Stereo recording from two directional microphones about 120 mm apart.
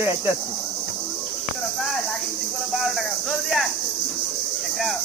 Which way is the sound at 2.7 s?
Centre (ahead or behind).